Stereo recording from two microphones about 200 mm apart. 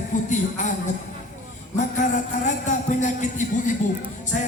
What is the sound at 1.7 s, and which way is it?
A man's voice, 40° left (ahead or behind).